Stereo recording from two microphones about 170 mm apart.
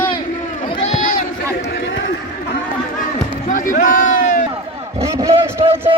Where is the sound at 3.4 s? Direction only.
50° left (ahead or behind).